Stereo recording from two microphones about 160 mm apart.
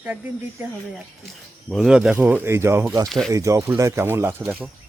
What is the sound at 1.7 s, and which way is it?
Speech, centre (ahead or behind).